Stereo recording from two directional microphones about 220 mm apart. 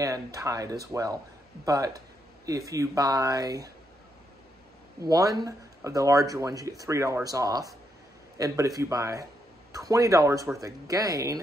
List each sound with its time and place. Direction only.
0.0 s speech: 15° right (ahead or behind)
5.0 s speech: 15° right (ahead or behind)